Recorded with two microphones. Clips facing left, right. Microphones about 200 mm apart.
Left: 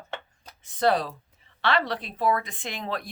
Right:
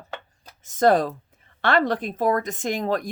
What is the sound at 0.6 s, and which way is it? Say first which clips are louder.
Speech: right 5 dB; 45° right (ahead or behind).